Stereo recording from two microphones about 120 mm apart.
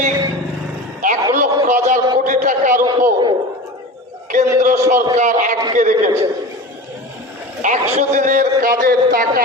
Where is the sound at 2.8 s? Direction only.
35° right (ahead or behind).